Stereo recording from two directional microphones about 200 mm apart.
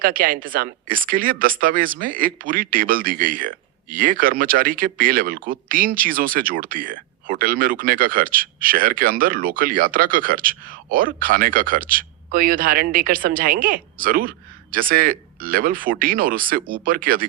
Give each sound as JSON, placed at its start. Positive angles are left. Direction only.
{"t": 0.0, "sound": "speech", "side_deg": -45}